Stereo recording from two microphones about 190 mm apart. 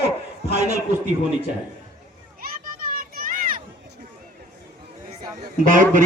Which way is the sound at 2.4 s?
50° right (ahead or behind).